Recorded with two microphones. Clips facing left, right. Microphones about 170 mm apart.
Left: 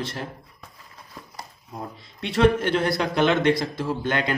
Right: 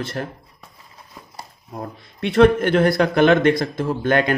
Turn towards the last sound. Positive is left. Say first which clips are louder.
# right 6 dB
turn(degrees=-55)  # may be behind; listen again after turning